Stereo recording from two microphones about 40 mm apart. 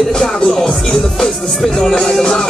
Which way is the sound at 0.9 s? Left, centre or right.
Centre.